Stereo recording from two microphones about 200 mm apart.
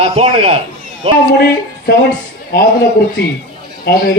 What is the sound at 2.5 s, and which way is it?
A man's voice, 50° left (ahead or behind).